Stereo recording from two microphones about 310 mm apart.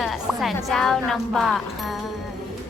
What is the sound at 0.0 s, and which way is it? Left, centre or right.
A woman's voice, centre.